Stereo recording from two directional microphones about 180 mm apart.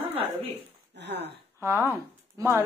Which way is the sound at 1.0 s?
70° right (ahead or behind).